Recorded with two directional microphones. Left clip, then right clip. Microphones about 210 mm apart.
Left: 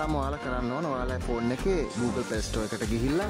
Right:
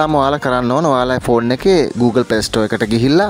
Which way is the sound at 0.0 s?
45° right (ahead or behind).